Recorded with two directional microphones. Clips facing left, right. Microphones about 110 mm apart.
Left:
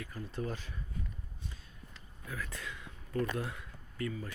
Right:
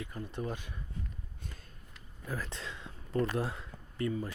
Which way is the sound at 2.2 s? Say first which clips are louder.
Right 3 dB; 30° right (ahead or behind).